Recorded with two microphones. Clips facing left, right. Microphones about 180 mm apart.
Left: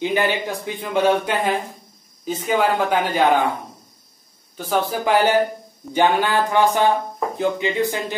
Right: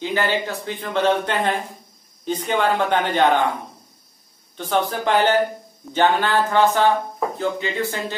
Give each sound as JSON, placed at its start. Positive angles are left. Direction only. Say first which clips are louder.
{"t": 0.0, "sound": "speech", "louder": "left 2 dB", "side_deg": 15}
{"t": 4.6, "sound": "speech", "louder": "even", "side_deg": 5}